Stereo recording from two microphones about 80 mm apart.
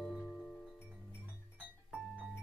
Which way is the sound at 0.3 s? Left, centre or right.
Centre.